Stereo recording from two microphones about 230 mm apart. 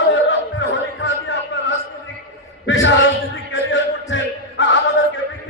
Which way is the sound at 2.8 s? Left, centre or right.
Left.